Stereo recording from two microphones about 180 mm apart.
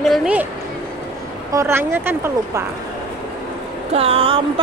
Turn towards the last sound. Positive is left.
turn(degrees=-30)  # may be behind; listen again after turning